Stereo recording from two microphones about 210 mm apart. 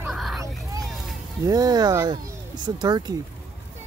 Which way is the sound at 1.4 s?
20° right (ahead or behind).